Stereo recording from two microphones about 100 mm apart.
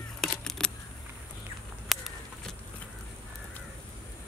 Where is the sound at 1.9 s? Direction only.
Centre (ahead or behind).